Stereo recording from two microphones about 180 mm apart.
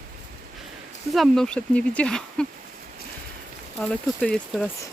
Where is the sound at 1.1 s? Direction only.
Centre (ahead or behind).